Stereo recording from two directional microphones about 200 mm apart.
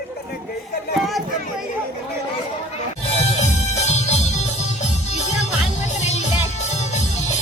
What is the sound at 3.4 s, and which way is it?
Music, 35° left (ahead or behind).